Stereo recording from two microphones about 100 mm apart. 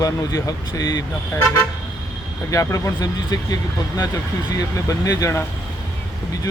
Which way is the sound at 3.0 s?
40° left (ahead or behind).